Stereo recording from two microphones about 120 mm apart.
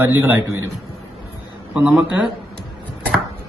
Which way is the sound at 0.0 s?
15° right (ahead or behind).